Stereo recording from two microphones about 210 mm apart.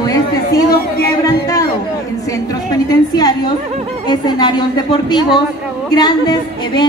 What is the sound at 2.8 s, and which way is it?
Speech, 20° left (ahead or behind).